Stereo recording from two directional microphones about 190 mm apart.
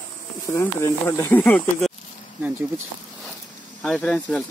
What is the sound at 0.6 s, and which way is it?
Speech, 15° left (ahead or behind).